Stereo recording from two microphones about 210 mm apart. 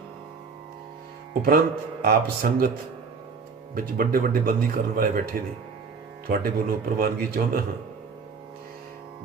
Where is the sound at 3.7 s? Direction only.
45° right (ahead or behind).